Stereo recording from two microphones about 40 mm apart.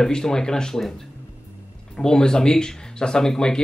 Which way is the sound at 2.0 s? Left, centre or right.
Centre.